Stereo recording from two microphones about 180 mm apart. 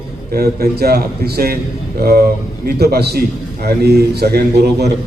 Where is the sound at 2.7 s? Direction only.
60° right (ahead or behind).